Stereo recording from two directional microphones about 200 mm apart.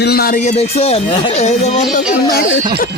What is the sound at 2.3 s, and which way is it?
Speech, 55° left (ahead or behind).